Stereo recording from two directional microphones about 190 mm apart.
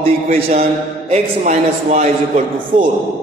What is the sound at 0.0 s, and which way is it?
A man's voice, 35° right (ahead or behind).